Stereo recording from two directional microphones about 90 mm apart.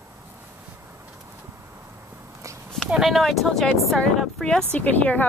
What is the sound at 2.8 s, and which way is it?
Speech, 5° right (ahead or behind).